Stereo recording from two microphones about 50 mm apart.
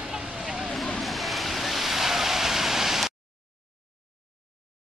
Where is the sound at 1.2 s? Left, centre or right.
Centre.